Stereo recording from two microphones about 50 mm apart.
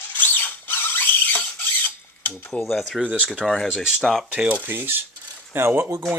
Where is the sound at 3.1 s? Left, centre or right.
Right.